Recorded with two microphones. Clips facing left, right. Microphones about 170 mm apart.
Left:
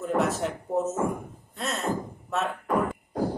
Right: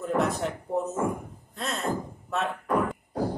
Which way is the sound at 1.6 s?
Centre (ahead or behind).